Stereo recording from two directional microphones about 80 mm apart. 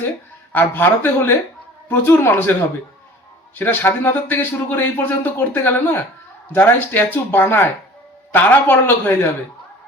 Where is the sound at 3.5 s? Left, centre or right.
Left.